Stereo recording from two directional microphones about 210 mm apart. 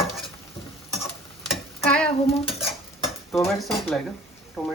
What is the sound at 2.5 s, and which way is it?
Stir, centre (ahead or behind).